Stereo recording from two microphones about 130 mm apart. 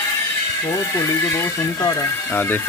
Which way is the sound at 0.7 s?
20° left (ahead or behind).